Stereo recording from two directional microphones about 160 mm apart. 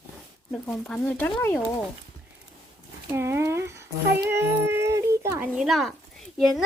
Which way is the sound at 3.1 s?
15° right (ahead or behind).